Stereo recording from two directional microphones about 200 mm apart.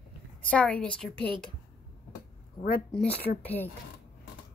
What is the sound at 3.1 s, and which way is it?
Speech, 50° left (ahead or behind).